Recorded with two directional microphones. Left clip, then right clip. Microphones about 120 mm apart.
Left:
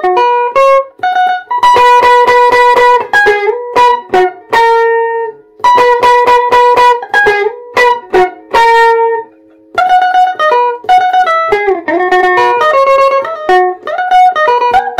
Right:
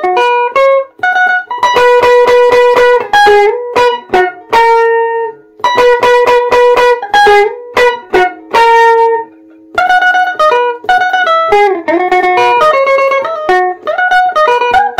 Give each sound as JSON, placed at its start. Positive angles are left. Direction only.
{"t": 0.0, "sound": "music", "side_deg": -35}